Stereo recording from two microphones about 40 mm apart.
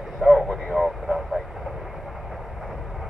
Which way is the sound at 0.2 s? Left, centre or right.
Centre.